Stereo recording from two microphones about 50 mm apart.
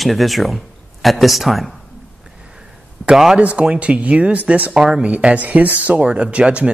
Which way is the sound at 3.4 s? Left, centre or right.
Right.